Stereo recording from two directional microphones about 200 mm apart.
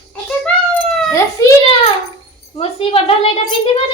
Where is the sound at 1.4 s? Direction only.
15° left (ahead or behind).